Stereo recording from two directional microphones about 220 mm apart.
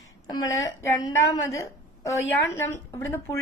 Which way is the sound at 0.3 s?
20° left (ahead or behind).